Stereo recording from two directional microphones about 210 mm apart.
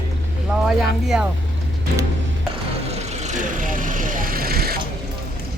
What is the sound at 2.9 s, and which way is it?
Vehicle, 35° right (ahead or behind).